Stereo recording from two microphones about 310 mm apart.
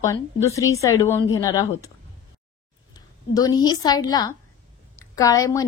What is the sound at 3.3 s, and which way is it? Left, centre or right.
A woman's voice, centre.